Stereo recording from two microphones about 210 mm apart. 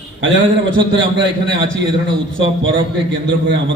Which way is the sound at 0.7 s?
20° right (ahead or behind).